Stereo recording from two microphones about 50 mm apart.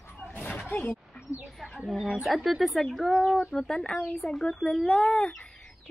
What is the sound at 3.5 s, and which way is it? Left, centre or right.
Speech, centre.